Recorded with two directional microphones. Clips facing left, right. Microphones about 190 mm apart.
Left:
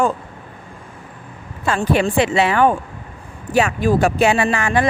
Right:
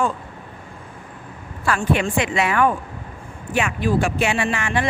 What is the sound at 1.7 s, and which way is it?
Speech, 35° left (ahead or behind).